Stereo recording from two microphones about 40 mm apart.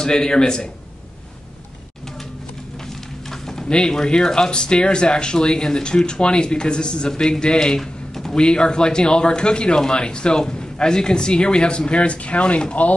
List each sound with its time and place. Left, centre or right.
0.0 s speech: centre
3.3 s a sound: centre
3.6 s speech: left